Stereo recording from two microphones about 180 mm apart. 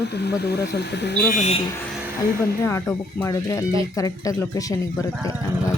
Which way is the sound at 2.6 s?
15° left (ahead or behind).